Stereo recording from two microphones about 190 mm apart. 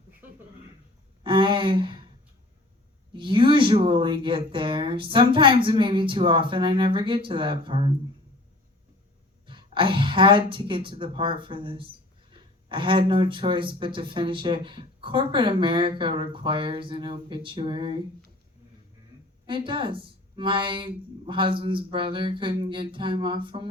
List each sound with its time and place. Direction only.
1.2 s speech: 25° right (ahead or behind)
3.1 s speech: 25° right (ahead or behind)
9.5 s speech: 25° right (ahead or behind)
19.5 s speech: 25° right (ahead or behind)